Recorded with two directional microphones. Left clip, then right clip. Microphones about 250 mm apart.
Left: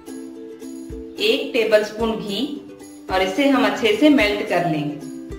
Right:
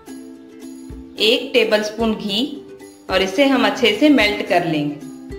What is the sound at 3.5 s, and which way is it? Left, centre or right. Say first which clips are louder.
Speech: right 2 dB; right.